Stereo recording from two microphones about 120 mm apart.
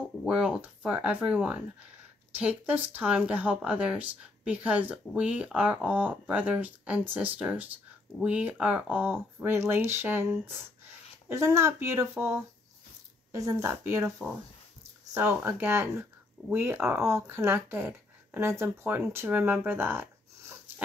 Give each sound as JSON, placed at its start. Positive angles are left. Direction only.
{"t": 0.2, "sound": "speech", "side_deg": -5}